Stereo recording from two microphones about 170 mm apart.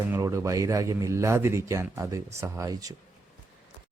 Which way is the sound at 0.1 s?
15° right (ahead or behind).